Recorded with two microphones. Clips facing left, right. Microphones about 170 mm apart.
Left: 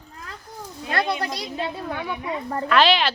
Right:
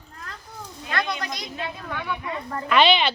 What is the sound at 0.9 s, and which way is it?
A woman's voice, 30° left (ahead or behind).